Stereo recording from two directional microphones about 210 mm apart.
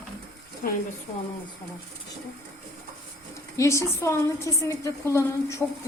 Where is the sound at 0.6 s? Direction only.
40° left (ahead or behind).